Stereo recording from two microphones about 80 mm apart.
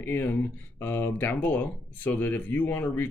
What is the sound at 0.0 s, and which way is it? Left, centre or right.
Speech, left.